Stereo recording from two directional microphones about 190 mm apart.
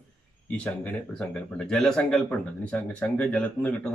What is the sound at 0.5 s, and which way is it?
A man's voice, 5° left (ahead or behind).